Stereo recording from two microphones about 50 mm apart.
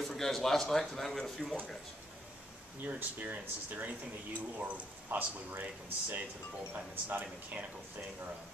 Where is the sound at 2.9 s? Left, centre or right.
Right.